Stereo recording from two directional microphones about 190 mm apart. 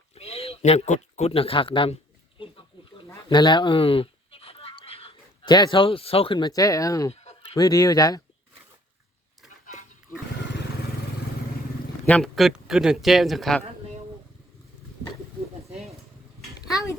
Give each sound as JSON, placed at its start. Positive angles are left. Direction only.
{"t": 0.1, "sound": "speech", "side_deg": 30}
{"t": 3.1, "sound": "speech", "side_deg": 25}
{"t": 12.0, "sound": "speech", "side_deg": 5}
{"t": 15.7, "sound": "a sound", "side_deg": 0}